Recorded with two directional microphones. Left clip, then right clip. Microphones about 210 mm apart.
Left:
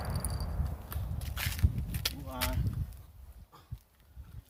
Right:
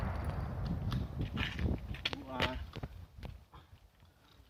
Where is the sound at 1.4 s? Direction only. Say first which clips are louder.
Left 1 dB; 35° left (ahead or behind).